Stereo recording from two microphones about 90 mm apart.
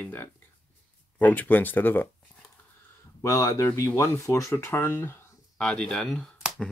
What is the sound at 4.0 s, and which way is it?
Speech, 35° left (ahead or behind).